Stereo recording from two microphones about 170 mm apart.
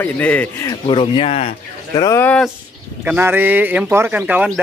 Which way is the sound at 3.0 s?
10° right (ahead or behind).